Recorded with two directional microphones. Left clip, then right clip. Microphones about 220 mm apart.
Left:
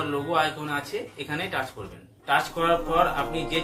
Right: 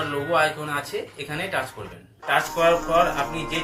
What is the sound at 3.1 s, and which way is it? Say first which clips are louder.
Speech: right 1 dB; 15° left (ahead or behind).